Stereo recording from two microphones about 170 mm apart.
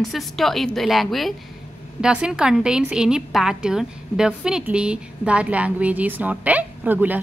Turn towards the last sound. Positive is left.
turn(degrees=-10)  # may be behind; listen again after turning